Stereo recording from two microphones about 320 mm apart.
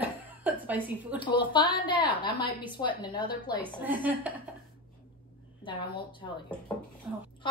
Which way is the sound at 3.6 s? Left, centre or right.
Centre.